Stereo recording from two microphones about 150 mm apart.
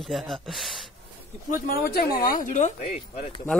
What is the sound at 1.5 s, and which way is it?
Speech, 80° left.